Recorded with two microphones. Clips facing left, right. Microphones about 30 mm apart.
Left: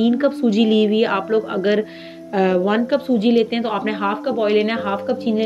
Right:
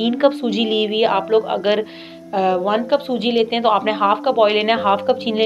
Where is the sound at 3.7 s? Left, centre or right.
Right.